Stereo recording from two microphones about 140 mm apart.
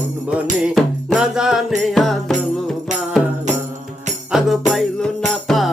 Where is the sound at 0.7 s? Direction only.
5° right (ahead or behind).